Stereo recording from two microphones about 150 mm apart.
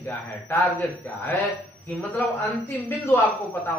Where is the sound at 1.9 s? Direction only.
10° left (ahead or behind).